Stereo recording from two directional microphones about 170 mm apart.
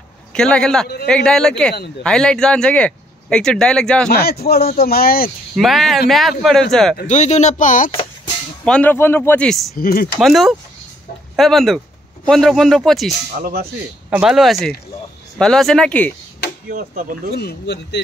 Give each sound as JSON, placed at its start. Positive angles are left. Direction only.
{"t": 0.3, "sound": "a man's voice", "side_deg": 5}
{"t": 4.1, "sound": "speech", "side_deg": 65}
{"t": 5.6, "sound": "speech", "side_deg": 0}
{"t": 7.1, "sound": "speech", "side_deg": 45}
{"t": 8.6, "sound": "speech", "side_deg": 10}
{"t": 9.8, "sound": "speech", "side_deg": 60}
{"t": 10.2, "sound": "speech", "side_deg": 0}
{"t": 13.3, "sound": "speech", "side_deg": -60}
{"t": 14.2, "sound": "speech", "side_deg": 0}
{"t": 16.7, "sound": "speech", "side_deg": -55}
{"t": 17.4, "sound": "speech", "side_deg": 80}